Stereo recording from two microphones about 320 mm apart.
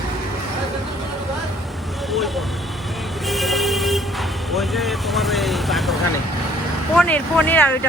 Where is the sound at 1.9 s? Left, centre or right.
Centre.